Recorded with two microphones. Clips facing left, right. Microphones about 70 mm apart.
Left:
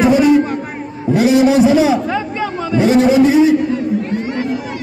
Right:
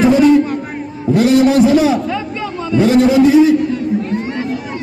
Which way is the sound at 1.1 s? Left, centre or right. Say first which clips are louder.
Even; centre.